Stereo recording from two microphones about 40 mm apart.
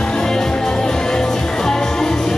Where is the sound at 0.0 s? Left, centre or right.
Centre.